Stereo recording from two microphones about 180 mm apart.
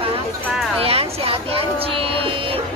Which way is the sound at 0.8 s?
30° right (ahead or behind).